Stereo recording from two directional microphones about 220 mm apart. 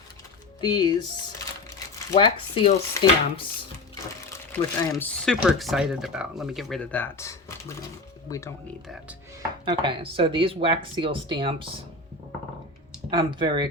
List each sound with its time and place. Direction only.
0.6 s speech: 20° left (ahead or behind)
4.3 s speech: 10° left (ahead or behind)
9.6 s speech: 20° right (ahead or behind)
13.1 s speech: 20° right (ahead or behind)